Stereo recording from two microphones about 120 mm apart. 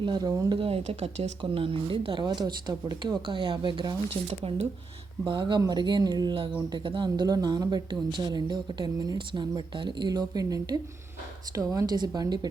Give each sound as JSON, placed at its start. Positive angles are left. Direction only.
{"t": 0.0, "sound": "speech", "side_deg": -35}
{"t": 0.7, "sound": "speech", "side_deg": -65}
{"t": 1.4, "sound": "speech", "side_deg": -45}
{"t": 5.2, "sound": "speech", "side_deg": -40}